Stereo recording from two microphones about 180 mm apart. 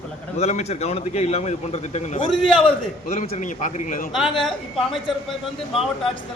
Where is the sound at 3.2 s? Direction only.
45° left (ahead or behind).